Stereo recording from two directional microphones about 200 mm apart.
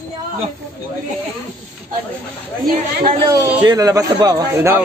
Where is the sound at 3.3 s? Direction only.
20° right (ahead or behind).